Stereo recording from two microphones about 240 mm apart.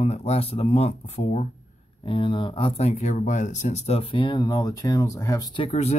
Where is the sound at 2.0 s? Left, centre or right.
Centre.